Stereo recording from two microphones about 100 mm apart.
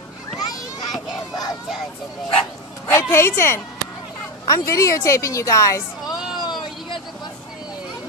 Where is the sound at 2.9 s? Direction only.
30° left (ahead or behind).